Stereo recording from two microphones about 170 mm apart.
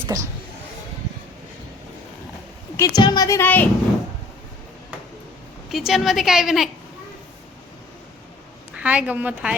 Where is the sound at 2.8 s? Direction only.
20° left (ahead or behind).